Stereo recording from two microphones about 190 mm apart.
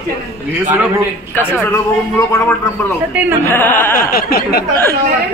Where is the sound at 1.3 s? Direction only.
10° left (ahead or behind).